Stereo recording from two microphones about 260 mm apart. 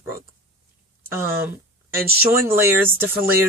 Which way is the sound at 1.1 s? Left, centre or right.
Centre.